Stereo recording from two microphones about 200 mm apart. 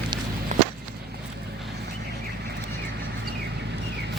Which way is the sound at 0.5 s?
35° right (ahead or behind).